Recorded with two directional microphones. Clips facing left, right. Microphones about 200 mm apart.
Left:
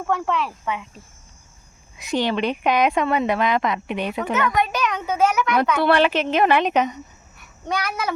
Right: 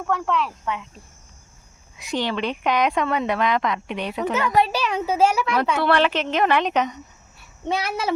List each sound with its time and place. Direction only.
0.1 s speech: centre (ahead or behind)
2.1 s a woman's voice: 15° left (ahead or behind)
4.4 s speech: 30° right (ahead or behind)
5.8 s a woman's voice: 10° left (ahead or behind)
7.3 s child singing: 25° right (ahead or behind)